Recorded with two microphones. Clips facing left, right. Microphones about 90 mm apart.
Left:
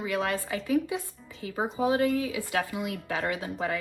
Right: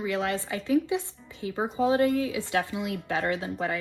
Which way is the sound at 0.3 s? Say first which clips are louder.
Right 2 dB; 25° right (ahead or behind).